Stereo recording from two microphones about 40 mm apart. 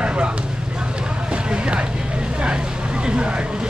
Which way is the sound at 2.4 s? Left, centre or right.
Right.